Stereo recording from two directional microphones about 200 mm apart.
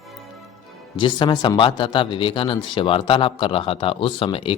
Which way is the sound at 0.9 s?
25° left (ahead or behind).